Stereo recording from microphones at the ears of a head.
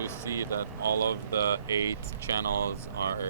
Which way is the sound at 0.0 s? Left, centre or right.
Right.